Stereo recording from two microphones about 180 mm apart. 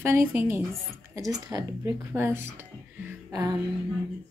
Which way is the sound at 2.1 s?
15° right (ahead or behind).